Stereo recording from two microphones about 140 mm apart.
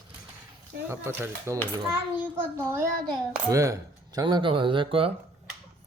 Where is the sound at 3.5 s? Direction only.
20° right (ahead or behind); by 5.1 s 40° right (ahead or behind).